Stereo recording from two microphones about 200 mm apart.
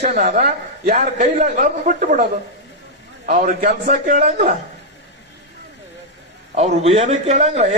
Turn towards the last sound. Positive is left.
turn(degrees=-35)  # may be behind; listen again after turning